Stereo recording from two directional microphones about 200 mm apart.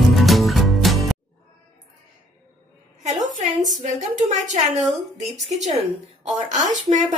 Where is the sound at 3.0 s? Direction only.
35° right (ahead or behind).